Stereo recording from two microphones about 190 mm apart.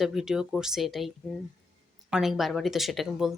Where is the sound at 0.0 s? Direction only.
Centre (ahead or behind).